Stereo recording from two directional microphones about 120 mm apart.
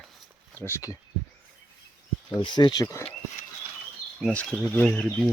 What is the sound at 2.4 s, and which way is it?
Speech, 40° left (ahead or behind).